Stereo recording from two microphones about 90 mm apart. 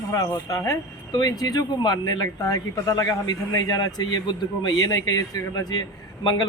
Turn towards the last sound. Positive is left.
turn(degrees=50)  # may be behind; listen again after turning